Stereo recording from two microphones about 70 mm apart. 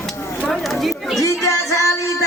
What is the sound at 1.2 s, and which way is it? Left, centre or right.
Music, left.